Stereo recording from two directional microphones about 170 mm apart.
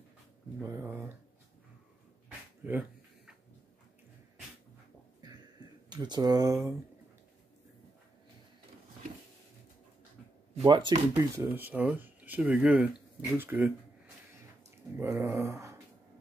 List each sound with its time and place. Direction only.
0.6 s speech: 15° right (ahead or behind)
2.6 s speech: 10° right (ahead or behind)
5.9 s speech: 25° right (ahead or behind)
10.6 s speech: 25° right (ahead or behind)
11.1 s speech: 15° right (ahead or behind)
15.0 s speech: 15° right (ahead or behind)